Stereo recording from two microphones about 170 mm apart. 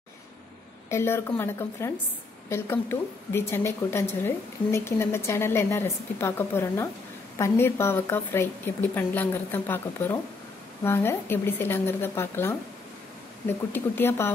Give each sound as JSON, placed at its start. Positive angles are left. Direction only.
{"t": 0.8, "sound": "a woman's voice", "side_deg": 15}